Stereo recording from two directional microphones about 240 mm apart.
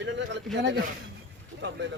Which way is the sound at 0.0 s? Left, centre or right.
Right.